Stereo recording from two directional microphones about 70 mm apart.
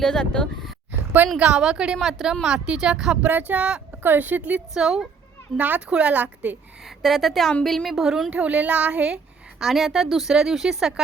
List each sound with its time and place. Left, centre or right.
0.0 s speech: centre
1.4 s a woman's voice: centre
3.2 s speech: right
4.7 s a woman's voice: centre
5.5 s speech: right
7.0 s speech: centre
8.3 s a woman's voice: centre
9.6 s speech: centre